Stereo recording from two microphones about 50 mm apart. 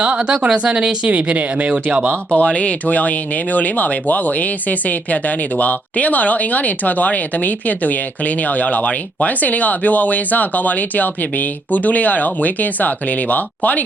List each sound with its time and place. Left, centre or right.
0.0 s speech: right
2.3 s speech: left